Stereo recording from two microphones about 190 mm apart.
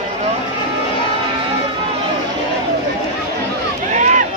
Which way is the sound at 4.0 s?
40° right (ahead or behind).